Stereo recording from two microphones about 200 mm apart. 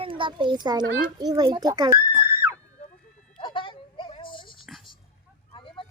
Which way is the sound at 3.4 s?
25° left (ahead or behind).